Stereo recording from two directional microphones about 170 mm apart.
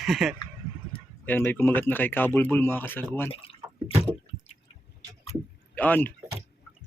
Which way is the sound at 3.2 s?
35° left (ahead or behind).